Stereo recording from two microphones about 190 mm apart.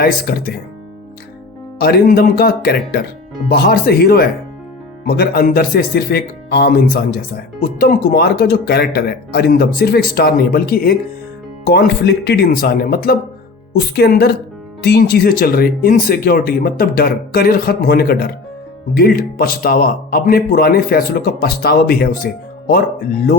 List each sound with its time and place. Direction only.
0.0 s speech: 50° left (ahead or behind)
1.8 s speech: 55° left (ahead or behind)